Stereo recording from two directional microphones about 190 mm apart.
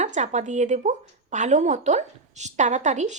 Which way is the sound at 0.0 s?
35° right (ahead or behind).